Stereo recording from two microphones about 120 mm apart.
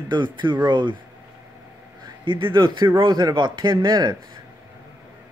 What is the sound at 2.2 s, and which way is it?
Speech, 45° right (ahead or behind).